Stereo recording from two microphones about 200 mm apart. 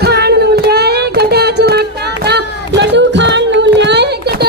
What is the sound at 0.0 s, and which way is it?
Child singing, 55° right (ahead or behind).